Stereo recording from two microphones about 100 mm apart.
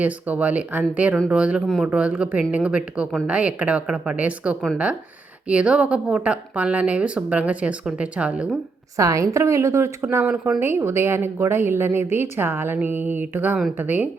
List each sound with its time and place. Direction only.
0.0 s a woman's voice: 15° right (ahead or behind)
9.0 s a woman's voice: 35° right (ahead or behind); by 14.1 s 15° right (ahead or behind)